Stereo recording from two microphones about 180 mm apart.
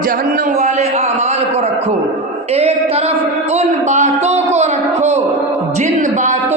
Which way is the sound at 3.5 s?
40° right (ahead or behind).